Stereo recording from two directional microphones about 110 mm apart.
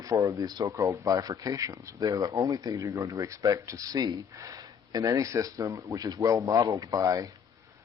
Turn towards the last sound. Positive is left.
turn(degrees=-30)  # may be behind; listen again after turning